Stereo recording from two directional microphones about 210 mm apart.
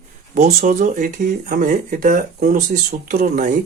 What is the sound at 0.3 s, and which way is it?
Speech, 35° right (ahead or behind).